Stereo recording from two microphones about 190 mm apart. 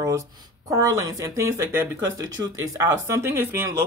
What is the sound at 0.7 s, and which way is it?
Speech, 15° right (ahead or behind).